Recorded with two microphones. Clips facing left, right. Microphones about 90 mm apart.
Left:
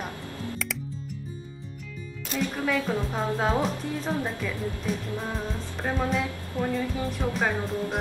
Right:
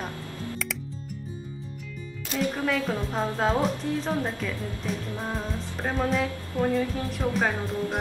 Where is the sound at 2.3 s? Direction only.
Centre (ahead or behind).